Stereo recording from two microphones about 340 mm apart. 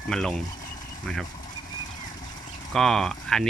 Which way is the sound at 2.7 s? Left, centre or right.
Centre.